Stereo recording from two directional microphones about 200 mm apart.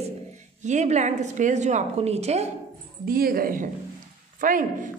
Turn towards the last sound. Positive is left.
turn(degrees=-40)  # may be behind; listen again after turning